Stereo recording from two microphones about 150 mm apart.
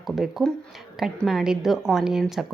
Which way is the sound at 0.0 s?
Centre (ahead or behind).